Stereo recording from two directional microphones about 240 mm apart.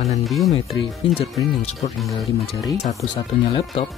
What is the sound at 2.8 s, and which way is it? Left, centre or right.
Speech, left.